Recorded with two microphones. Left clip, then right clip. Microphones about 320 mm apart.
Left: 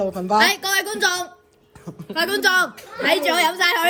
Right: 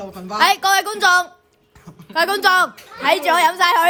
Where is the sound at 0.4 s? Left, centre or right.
Right.